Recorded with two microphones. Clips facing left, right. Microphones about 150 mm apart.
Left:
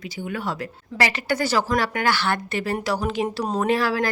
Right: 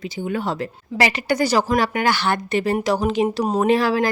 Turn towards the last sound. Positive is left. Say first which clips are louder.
# right 4 dB
turn(degrees=-20)  # may be behind; listen again after turning